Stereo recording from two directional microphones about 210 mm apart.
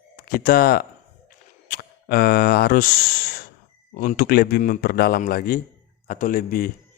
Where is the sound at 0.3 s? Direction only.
45° left (ahead or behind).